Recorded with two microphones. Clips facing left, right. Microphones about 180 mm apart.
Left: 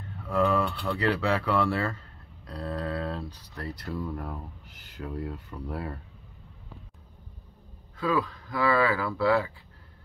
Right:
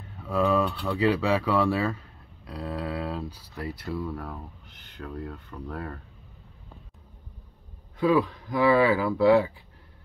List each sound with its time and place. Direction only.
0.2 s speech: 10° right (ahead or behind); by 5.9 s 10° left (ahead or behind)
8.0 s speech: 20° right (ahead or behind)